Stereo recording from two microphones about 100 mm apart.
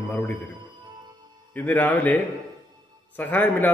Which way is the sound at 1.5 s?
15° left (ahead or behind).